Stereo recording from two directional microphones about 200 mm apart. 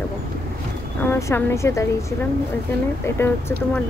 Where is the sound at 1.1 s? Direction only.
10° left (ahead or behind).